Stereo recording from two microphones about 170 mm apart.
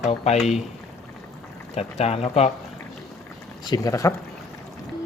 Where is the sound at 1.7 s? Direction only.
40° left (ahead or behind).